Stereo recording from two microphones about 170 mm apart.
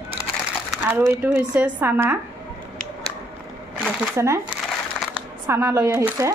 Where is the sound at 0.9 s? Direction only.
10° right (ahead or behind).